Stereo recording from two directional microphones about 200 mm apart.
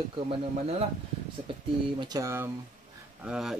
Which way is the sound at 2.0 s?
15° right (ahead or behind).